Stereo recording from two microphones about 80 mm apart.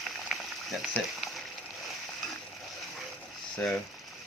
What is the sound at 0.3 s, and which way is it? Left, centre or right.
Boiling, centre.